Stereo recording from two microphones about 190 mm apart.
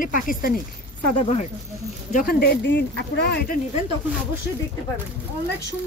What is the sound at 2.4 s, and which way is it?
Speech, 65° left (ahead or behind).